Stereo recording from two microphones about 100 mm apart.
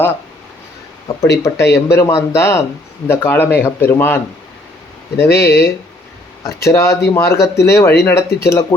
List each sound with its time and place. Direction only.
1.0 s speech: 30° left (ahead or behind)